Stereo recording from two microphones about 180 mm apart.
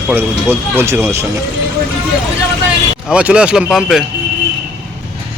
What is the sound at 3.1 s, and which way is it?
Speech, 5° right (ahead or behind).